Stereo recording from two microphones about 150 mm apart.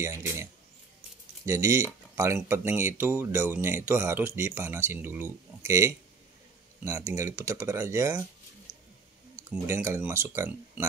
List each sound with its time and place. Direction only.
0.0 s a sound: 20° right (ahead or behind)
1.4 s speech: 20° right (ahead or behind)
9.4 s speech: 15° right (ahead or behind)